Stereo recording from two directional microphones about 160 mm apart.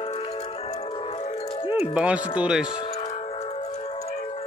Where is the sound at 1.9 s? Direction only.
5° right (ahead or behind).